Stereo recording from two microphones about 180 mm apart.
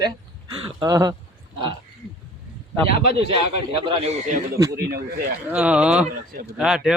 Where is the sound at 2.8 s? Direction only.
60° left (ahead or behind).